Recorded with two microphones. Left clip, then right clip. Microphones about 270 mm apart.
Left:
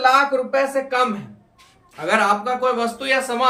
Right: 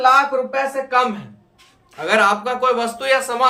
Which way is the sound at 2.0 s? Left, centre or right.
Centre.